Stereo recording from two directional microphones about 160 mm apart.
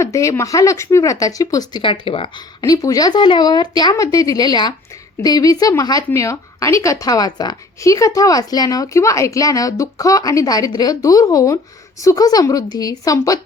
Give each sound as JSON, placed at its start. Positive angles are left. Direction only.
{"t": 0.0, "sound": "a woman's voice", "side_deg": 20}
{"t": 2.6, "sound": "a woman's voice", "side_deg": 20}